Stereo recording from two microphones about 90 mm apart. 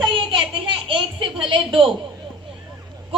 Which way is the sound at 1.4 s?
75° right (ahead or behind).